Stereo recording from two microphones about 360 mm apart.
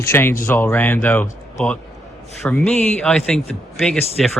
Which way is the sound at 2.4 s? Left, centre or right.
Centre.